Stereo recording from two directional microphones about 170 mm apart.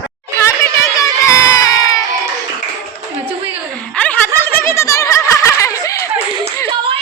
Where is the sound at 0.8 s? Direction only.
20° left (ahead or behind).